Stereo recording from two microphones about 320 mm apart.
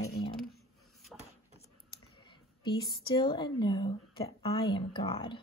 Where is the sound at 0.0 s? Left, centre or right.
Left.